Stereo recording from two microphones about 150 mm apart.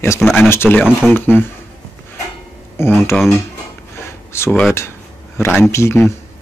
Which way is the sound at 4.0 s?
15° left (ahead or behind).